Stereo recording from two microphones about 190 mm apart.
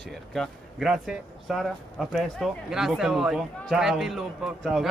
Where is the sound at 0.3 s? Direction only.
Centre (ahead or behind).